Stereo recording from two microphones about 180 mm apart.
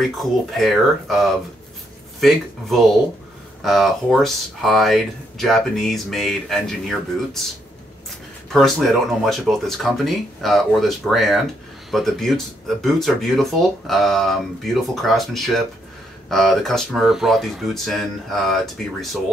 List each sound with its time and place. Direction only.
0.2 s speech: centre (ahead or behind)
8.5 s speech: centre (ahead or behind)